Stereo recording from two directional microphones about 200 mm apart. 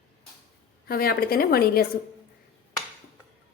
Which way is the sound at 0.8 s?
50° left (ahead or behind).